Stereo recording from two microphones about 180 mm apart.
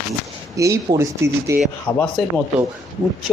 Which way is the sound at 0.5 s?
15° right (ahead or behind).